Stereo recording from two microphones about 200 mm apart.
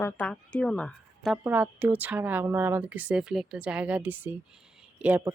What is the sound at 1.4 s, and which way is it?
Speech, 10° right (ahead or behind).